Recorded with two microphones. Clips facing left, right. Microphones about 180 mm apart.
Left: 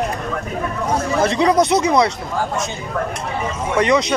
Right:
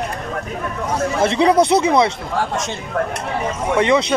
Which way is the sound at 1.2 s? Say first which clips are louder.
Right 1 dB; 25° right (ahead or behind).